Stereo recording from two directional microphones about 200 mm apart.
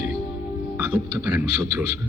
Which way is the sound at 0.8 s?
10° right (ahead or behind).